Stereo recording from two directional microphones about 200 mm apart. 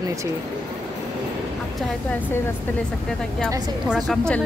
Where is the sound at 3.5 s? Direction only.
5° right (ahead or behind).